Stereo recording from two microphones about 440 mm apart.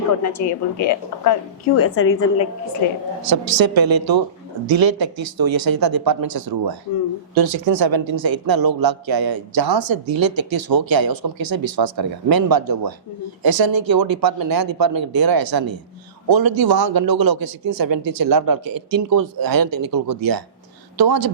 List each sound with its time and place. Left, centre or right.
0.2 s a woman's voice: left
3.2 s a woman's voice: right